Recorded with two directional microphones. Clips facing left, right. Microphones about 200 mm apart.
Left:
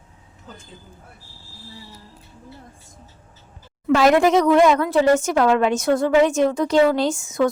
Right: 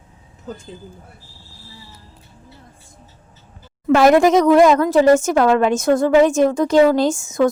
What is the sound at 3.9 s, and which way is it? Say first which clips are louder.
A woman's voice: right 3 dB; 45° right (ahead or behind).